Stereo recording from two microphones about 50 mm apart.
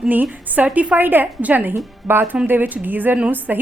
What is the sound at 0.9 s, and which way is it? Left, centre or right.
Speech, right.